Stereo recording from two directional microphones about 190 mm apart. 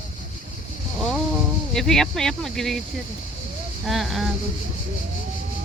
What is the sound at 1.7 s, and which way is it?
Speech, 5° left (ahead or behind).